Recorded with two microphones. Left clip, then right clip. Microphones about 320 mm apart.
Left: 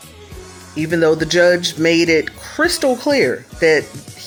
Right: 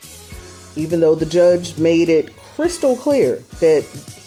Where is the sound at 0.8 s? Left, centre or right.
Left.